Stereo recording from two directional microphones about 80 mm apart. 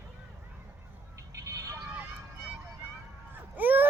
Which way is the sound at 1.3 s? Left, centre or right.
Right.